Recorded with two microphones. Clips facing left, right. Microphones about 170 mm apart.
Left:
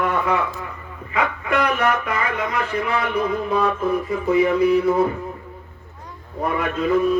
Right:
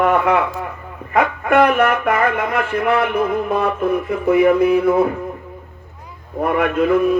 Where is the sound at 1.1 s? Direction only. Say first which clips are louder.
Right 7 dB; 55° right (ahead or behind).